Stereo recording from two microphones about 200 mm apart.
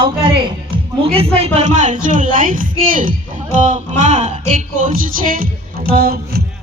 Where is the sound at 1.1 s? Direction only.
30° right (ahead or behind).